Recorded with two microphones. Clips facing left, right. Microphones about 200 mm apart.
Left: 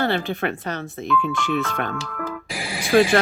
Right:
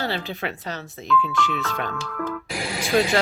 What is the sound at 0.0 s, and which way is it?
Speech, 55° left (ahead or behind).